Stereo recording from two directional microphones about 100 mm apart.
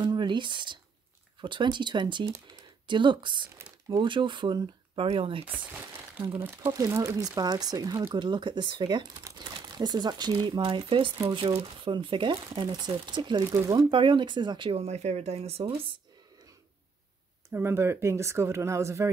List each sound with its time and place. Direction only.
0.0 s speech: 50° right (ahead or behind)
5.0 s speech: 75° right (ahead or behind)
5.5 s speech: 20° right (ahead or behind)
6.7 s speech: 35° right (ahead or behind); by 11.1 s 60° right (ahead or behind)
11.2 s speech: 75° right (ahead or behind)
11.9 s speech: 55° right (ahead or behind)
14.7 s speech: 90° right
17.5 s speech: 25° right (ahead or behind)